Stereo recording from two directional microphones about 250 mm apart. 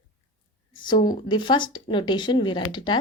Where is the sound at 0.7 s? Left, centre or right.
Centre.